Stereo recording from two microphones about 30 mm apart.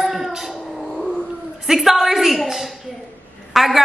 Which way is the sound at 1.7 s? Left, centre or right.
Centre.